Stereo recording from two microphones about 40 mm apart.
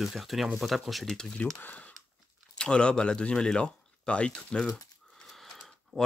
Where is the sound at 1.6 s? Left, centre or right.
Left.